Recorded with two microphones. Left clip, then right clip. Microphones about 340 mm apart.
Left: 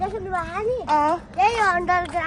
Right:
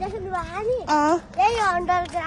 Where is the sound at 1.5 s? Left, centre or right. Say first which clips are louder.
Left 2 dB; left.